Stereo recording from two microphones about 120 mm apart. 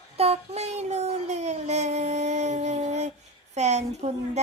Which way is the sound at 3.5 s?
70° right (ahead or behind).